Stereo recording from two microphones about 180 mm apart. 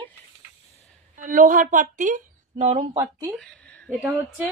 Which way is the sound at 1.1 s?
45° right (ahead or behind).